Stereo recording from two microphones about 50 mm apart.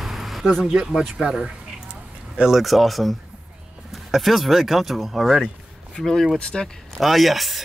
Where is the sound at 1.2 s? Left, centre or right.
Centre.